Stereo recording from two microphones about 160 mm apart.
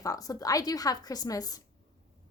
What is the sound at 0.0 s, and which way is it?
A woman's voice, 20° left (ahead or behind).